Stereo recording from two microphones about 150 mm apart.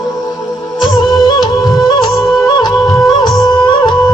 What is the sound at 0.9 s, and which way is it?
Music, 30° left (ahead or behind).